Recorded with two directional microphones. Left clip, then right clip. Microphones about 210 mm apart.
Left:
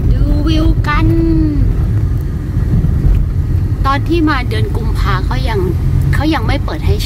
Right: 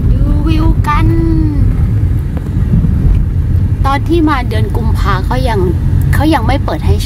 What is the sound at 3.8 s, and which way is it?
Vehicle, 15° right (ahead or behind).